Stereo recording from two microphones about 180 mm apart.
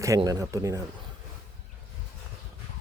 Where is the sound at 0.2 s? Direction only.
20° right (ahead or behind).